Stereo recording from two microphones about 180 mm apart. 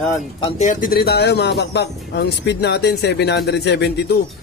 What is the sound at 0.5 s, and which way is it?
Speech, 45° left (ahead or behind).